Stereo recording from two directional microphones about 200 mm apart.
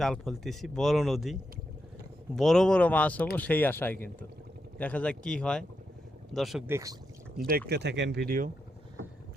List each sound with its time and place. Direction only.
0.0 s speech: centre (ahead or behind)
6.7 s speech: 15° right (ahead or behind)
7.4 s speech: 5° right (ahead or behind)
7.7 s speech: 55° right (ahead or behind)